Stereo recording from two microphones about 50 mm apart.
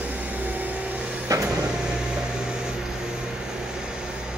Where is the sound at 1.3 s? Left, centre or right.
Right.